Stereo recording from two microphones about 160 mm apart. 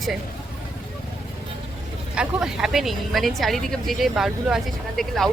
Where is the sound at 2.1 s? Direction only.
5° right (ahead or behind).